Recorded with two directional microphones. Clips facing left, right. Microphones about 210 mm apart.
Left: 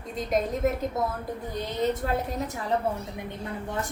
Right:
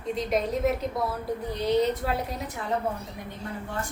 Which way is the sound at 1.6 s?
45° left (ahead or behind).